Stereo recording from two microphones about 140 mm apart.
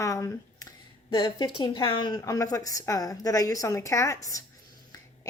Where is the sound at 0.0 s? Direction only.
20° left (ahead or behind).